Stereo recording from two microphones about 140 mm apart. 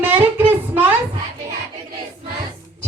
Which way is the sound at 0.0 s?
15° right (ahead or behind).